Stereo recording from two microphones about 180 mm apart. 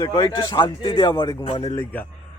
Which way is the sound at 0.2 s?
25° left (ahead or behind).